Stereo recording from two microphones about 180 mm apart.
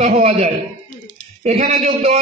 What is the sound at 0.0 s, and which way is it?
A man's voice, 35° right (ahead or behind).